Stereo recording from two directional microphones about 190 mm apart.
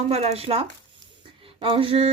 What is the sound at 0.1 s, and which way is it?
Speech, 35° right (ahead or behind).